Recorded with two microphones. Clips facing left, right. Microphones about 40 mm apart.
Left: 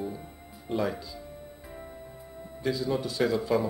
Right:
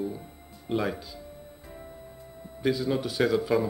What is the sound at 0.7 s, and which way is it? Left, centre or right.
Speech, centre.